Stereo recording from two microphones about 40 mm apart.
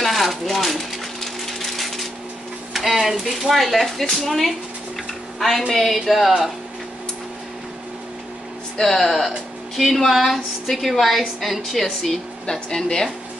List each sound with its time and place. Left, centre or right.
0.0 s a sound: centre
2.7 s a woman's voice: centre
5.7 s a woman's voice: centre
8.8 s a woman's voice: centre
12.4 s speech: centre